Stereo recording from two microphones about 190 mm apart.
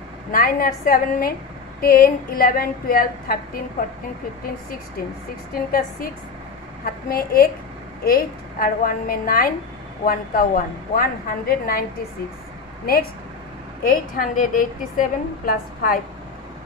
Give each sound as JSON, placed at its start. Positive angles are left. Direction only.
{"t": 0.3, "sound": "a woman's voice", "side_deg": 50}
{"t": 5.5, "sound": "a woman's voice", "side_deg": 50}
{"t": 7.1, "sound": "a woman's voice", "side_deg": 50}
{"t": 13.8, "sound": "a woman's voice", "side_deg": 45}